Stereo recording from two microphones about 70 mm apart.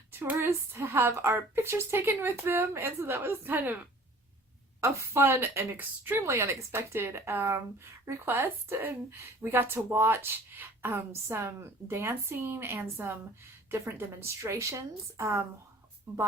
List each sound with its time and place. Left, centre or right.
0.1 s a woman's voice: right
4.8 s a woman's voice: right
5.2 s a woman's voice: right
6.2 s a woman's voice: right